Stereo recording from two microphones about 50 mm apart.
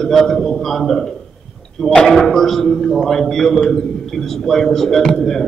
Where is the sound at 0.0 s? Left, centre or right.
Centre.